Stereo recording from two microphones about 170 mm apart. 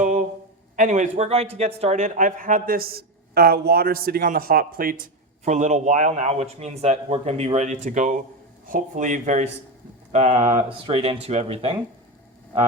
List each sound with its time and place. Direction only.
0.8 s speech: 45° right (ahead or behind)
5.5 s speech: 45° right (ahead or behind)